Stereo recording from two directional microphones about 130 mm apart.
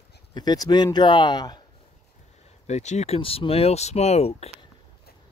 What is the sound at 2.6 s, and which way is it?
Speech, 60° left (ahead or behind).